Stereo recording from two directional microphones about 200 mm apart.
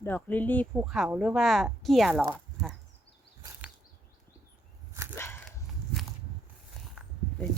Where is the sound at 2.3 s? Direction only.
5° left (ahead or behind).